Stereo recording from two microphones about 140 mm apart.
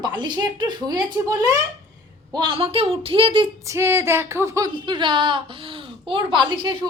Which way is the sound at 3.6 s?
20° right (ahead or behind).